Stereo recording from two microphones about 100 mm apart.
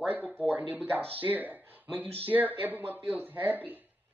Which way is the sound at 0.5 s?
15° right (ahead or behind).